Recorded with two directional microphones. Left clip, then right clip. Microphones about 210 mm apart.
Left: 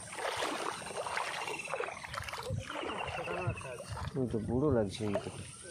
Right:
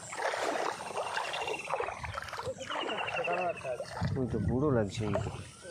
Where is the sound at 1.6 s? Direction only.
15° right (ahead or behind).